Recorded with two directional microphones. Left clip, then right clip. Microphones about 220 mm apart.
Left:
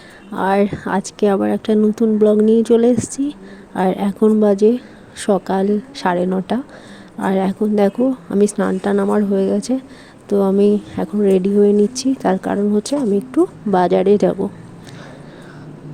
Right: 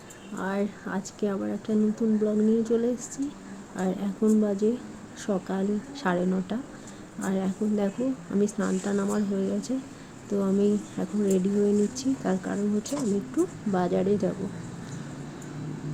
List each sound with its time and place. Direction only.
0.3 s speech: 40° left (ahead or behind)